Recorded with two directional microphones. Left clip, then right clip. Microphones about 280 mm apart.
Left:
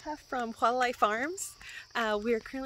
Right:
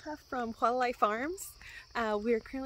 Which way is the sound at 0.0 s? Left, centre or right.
Centre.